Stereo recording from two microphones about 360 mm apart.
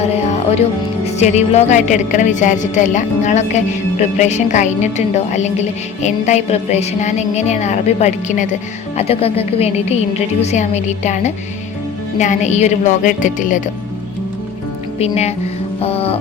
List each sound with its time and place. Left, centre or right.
0.0 s music: centre
1.2 s a woman's voice: centre
14.9 s a woman's voice: centre